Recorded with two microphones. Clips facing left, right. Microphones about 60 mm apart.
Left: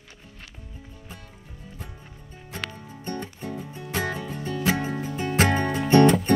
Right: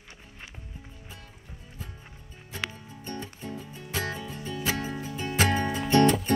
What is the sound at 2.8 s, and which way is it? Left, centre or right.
Music, left.